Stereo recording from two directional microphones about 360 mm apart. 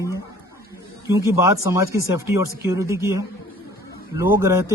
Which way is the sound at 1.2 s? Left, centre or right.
Centre.